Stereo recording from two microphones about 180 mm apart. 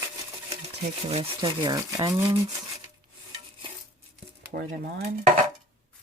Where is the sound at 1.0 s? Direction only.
30° right (ahead or behind).